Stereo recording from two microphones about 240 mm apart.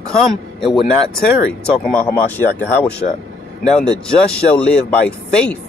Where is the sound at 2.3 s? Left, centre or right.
Centre.